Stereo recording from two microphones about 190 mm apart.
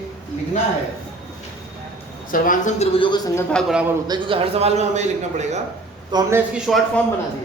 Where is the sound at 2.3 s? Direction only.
45° left (ahead or behind); by 3.2 s 30° left (ahead or behind).